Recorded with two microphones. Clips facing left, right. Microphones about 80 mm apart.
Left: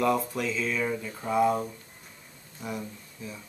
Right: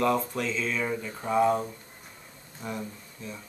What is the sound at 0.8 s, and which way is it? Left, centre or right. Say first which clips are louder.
Speech: even; centre.